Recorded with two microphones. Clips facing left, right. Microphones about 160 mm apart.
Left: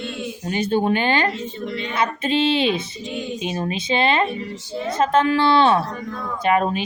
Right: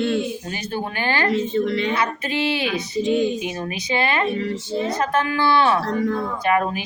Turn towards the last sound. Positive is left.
turn(degrees=25)  # may be behind; listen again after turning